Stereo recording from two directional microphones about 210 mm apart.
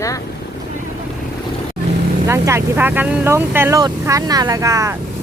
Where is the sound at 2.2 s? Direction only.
15° right (ahead or behind).